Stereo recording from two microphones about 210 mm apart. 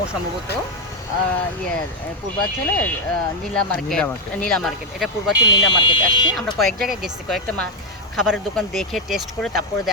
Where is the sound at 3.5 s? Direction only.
5° left (ahead or behind).